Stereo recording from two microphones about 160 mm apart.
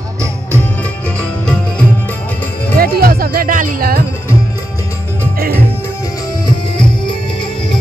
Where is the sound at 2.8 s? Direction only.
65° right (ahead or behind).